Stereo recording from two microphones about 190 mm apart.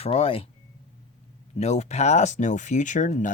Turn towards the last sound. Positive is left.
turn(degrees=40)  # may be behind; listen again after turning